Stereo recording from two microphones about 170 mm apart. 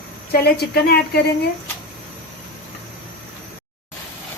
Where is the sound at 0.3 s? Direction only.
70° left (ahead or behind).